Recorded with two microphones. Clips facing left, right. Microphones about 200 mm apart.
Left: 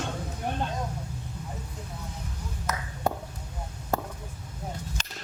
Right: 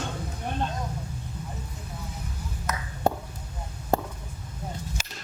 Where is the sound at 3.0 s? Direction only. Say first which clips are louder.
Right 3 dB; 30° right (ahead or behind).